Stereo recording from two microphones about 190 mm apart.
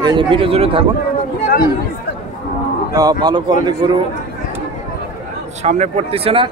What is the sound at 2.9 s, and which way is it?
Speech, 20° right (ahead or behind).